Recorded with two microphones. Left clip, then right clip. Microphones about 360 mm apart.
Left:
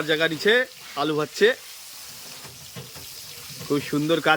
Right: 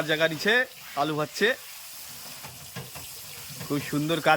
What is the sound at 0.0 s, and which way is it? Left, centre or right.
Speech, centre.